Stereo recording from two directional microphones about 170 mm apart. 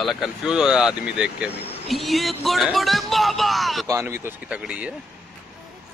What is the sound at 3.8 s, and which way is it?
Speech, 15° right (ahead or behind).